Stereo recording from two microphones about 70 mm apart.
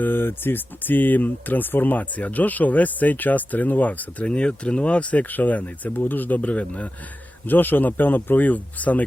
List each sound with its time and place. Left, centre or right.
0.0 s speech: left